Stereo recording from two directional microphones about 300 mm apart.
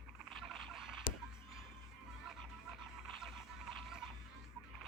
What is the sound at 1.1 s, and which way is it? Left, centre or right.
Music, left.